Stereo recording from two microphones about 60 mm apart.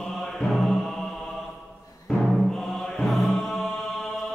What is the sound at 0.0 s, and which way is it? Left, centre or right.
Mantra, centre.